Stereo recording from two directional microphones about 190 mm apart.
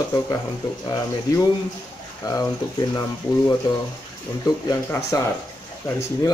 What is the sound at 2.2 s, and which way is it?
Speech, 20° left (ahead or behind).